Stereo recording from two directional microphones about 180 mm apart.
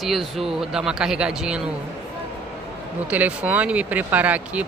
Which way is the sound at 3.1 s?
5° right (ahead or behind).